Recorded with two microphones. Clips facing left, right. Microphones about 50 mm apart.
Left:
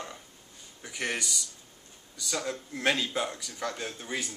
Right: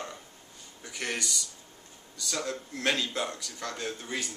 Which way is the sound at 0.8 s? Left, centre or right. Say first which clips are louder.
Left 1 dB; centre.